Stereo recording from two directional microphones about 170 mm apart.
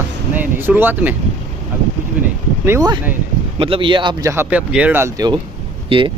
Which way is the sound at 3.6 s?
30° right (ahead or behind).